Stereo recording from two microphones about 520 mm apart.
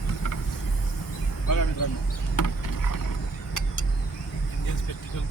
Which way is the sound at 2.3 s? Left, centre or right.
Left.